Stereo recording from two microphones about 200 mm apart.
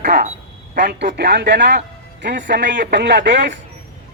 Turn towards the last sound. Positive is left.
turn(degrees=-60)  # may be behind; listen again after turning